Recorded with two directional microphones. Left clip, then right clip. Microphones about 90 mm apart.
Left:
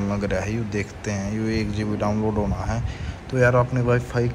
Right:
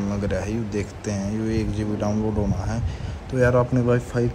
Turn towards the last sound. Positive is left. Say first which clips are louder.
# even
turn(degrees=-30)  # may be behind; listen again after turning